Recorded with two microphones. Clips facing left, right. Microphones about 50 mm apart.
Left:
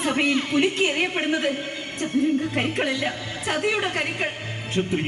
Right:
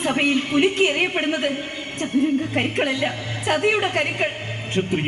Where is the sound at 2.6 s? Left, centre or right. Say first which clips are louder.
Right 2 dB; right.